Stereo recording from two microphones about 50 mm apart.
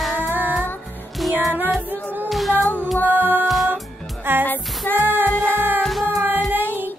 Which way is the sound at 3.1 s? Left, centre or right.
Right.